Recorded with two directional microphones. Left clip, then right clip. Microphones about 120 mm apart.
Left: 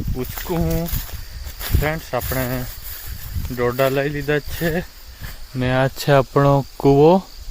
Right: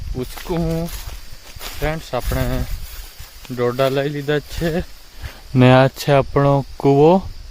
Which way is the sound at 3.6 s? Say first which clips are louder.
Right 1 dB; 15° right (ahead or behind).